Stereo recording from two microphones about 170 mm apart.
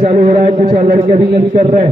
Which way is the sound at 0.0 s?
60° right (ahead or behind).